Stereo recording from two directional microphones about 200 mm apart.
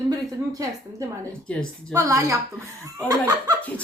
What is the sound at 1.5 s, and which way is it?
Speech, 5° left (ahead or behind).